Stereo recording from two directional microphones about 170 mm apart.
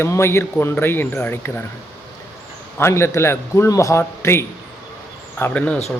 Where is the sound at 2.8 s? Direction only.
15° left (ahead or behind).